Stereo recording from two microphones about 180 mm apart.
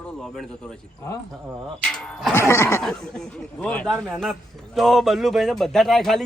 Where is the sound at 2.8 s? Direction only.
5° left (ahead or behind).